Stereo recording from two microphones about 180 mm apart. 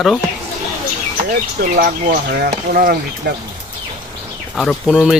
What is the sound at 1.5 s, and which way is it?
Speech, 50° right (ahead or behind).